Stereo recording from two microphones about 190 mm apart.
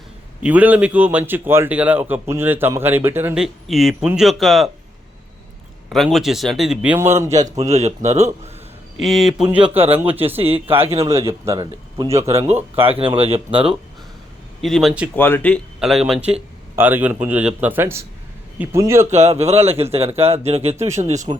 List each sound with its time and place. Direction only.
0.4 s a man's voice: 10° right (ahead or behind)
5.9 s a man's voice: centre (ahead or behind); by 7.7 s 15° right (ahead or behind)
7.7 s speech: 35° right (ahead or behind)
9.0 s a man's voice: centre (ahead or behind)
10.2 s speech: 30° right (ahead or behind)
11.0 s a man's voice: 15° right (ahead or behind)
12.3 s speech: 35° right (ahead or behind)
14.6 s a man's voice: centre (ahead or behind)
15.1 s a man's voice: 10° left (ahead or behind); by 19.0 s 15° right (ahead or behind)
19.1 s speech: 35° right (ahead or behind)